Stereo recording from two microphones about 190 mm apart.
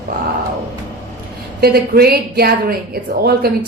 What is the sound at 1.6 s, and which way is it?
A woman's voice, 55° right (ahead or behind).